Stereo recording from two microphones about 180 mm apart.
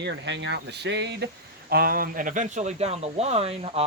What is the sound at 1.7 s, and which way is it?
Speech, 55° right (ahead or behind).